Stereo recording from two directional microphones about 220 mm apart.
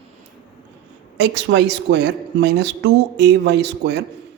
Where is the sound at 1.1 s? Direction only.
50° right (ahead or behind).